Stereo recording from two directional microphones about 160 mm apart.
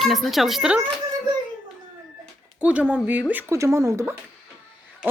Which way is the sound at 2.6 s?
10° right (ahead or behind).